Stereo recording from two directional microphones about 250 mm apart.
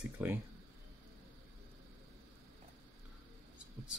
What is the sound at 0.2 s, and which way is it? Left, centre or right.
Speech, centre.